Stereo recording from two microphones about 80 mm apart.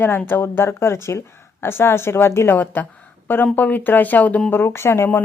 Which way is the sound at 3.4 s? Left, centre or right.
Left.